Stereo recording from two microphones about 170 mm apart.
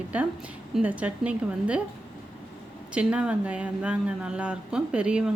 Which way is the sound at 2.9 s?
5° right (ahead or behind).